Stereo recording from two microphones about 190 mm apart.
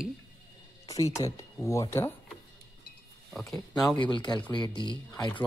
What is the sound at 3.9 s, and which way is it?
Speech, 25° left (ahead or behind).